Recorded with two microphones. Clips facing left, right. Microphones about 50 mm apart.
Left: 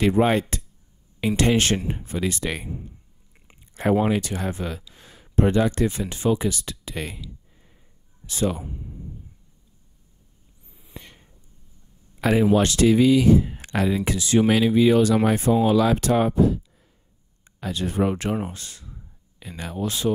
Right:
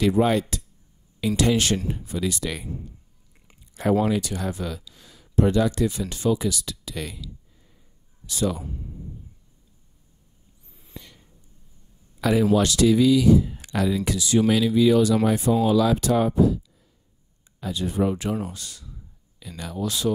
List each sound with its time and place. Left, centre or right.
0.0 s speech: left
4.1 s speech: left
8.3 s speech: left
10.7 s a sound: centre
11.0 s a sound: left
12.2 s speech: left
17.6 s speech: left
18.3 s speech: left